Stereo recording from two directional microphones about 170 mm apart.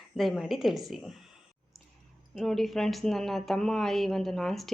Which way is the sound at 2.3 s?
Centre (ahead or behind).